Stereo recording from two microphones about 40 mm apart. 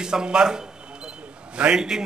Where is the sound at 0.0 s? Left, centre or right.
Centre.